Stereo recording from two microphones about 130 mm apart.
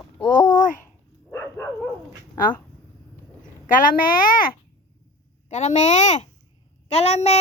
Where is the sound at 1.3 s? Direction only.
20° left (ahead or behind).